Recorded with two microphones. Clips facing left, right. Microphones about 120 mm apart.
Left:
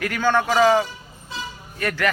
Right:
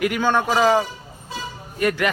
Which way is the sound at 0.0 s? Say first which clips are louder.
Right 1 dB; 15° right (ahead or behind).